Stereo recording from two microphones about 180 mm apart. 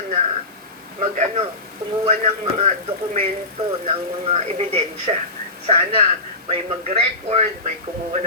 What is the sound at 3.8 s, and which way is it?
Speech, 35° right (ahead or behind).